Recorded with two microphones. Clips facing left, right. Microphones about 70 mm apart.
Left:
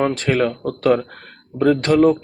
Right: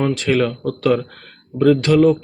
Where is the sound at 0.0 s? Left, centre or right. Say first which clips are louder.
Right 1 dB; left.